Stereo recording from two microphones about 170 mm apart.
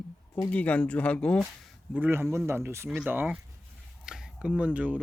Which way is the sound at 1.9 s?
10° right (ahead or behind).